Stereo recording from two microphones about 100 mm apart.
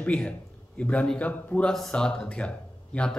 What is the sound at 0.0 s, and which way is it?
A man's voice, 10° left (ahead or behind).